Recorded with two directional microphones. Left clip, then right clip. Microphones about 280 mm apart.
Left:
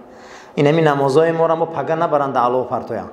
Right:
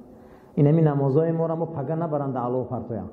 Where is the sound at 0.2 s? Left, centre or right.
Centre.